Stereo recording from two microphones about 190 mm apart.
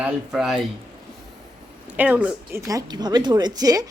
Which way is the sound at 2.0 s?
10° right (ahead or behind).